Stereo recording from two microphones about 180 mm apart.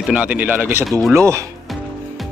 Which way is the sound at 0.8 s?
Centre (ahead or behind).